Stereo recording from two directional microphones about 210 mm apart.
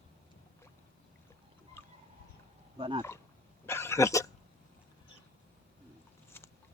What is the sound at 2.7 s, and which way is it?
Speech, 25° right (ahead or behind).